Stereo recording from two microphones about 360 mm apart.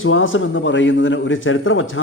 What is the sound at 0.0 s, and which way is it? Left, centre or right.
A man's voice, left.